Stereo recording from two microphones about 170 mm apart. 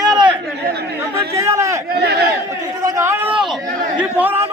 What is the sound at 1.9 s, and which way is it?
Speech, 70° right (ahead or behind).